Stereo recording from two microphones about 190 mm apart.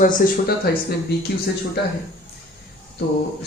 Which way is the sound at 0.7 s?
55° left (ahead or behind).